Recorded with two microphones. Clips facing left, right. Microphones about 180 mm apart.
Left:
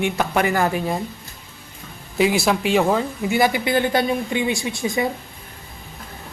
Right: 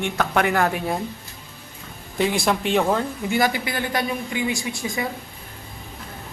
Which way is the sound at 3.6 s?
25° left (ahead or behind).